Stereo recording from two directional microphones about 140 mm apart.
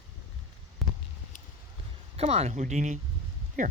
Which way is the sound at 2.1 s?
45° right (ahead or behind).